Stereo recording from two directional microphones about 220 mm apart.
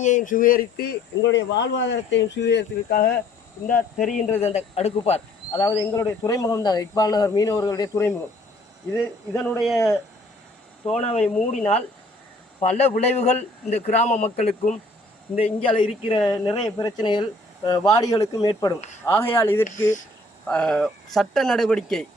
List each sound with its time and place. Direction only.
0.0 s speech: 35° left (ahead or behind)
3.8 s speech: 5° left (ahead or behind)
4.1 s a man's voice: 30° left (ahead or behind)
5.6 s a man's voice: 10° left (ahead or behind)
9.7 s a man's voice: 15° left (ahead or behind)
10.9 s a man's voice: 30° left (ahead or behind)
12.5 s a man's voice: 30° left (ahead or behind); by 22.0 s centre (ahead or behind)